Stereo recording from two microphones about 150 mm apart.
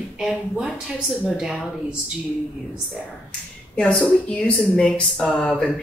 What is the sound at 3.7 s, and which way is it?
Speech, 5° left (ahead or behind).